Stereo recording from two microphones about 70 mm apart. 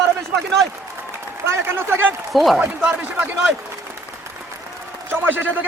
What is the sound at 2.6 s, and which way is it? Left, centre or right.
Speech, centre.